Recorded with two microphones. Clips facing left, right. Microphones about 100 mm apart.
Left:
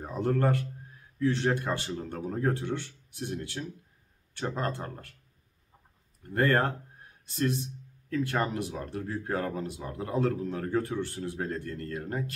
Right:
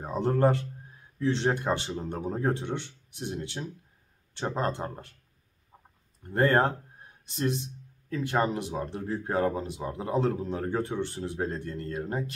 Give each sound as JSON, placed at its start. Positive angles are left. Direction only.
{"t": 0.0, "sound": "a man's voice", "side_deg": -25}
{"t": 6.2, "sound": "speech", "side_deg": -25}